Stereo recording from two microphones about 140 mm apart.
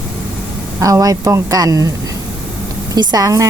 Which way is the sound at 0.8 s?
25° right (ahead or behind).